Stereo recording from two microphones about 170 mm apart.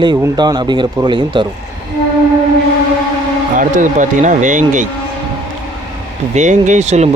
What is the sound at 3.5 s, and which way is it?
Speech, 50° right (ahead or behind).